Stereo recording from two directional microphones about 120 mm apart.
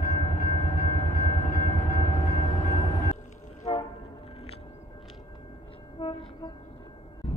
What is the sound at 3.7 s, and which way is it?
Train horn, 45° left (ahead or behind).